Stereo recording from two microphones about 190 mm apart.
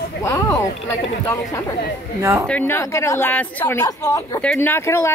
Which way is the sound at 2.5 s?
10° left (ahead or behind).